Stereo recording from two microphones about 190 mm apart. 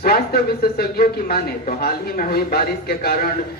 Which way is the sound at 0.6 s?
55° left (ahead or behind).